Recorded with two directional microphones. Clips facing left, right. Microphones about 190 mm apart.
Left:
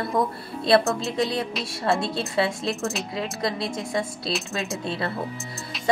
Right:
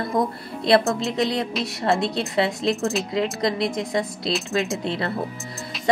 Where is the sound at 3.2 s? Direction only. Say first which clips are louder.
Right 5 dB; 20° right (ahead or behind).